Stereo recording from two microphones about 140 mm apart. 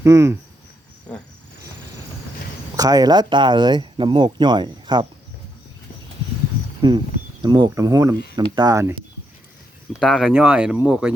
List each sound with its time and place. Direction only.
0.0 s speech: 20° right (ahead or behind)
2.7 s speech: 25° right (ahead or behind)
6.8 s speech: 35° right (ahead or behind)
10.0 s speech: centre (ahead or behind)
10.3 s speech: 10° right (ahead or behind)